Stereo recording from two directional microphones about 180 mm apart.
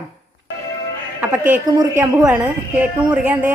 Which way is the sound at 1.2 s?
10° right (ahead or behind).